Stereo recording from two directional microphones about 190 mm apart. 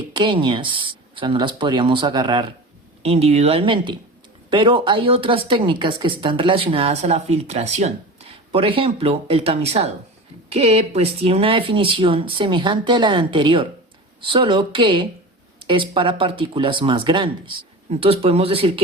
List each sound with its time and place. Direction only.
0.1 s speech: 25° right (ahead or behind)